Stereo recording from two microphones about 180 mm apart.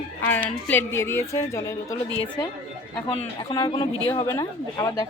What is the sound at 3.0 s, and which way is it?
Speech, 25° left (ahead or behind).